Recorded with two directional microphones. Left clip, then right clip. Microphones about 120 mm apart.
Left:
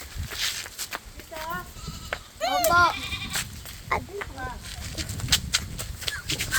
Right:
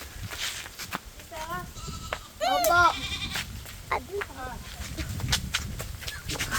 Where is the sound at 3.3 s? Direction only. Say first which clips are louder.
Left 2 dB; 60° left (ahead or behind).